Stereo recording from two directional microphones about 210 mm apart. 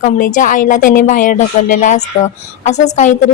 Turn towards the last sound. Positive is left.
turn(degrees=35)  # may be behind; listen again after turning